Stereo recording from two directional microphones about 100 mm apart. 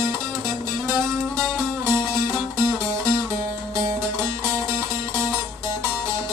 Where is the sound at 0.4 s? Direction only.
30° right (ahead or behind).